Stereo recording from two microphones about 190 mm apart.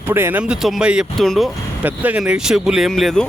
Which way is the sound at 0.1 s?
10° right (ahead or behind).